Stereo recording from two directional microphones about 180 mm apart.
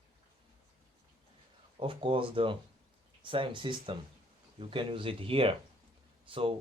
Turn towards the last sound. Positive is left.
turn(degrees=-30)  # may be behind; listen again after turning